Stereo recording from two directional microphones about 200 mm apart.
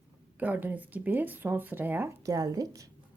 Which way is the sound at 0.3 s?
10° right (ahead or behind).